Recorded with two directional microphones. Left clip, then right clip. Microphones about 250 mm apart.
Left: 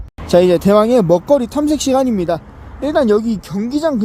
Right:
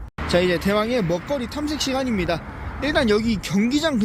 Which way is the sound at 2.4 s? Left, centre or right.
Right.